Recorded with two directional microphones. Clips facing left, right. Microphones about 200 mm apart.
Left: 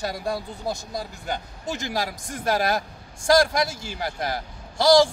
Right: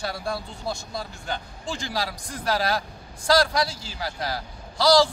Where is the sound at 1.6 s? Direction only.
45° left (ahead or behind).